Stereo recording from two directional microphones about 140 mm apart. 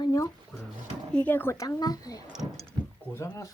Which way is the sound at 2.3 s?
Centre (ahead or behind).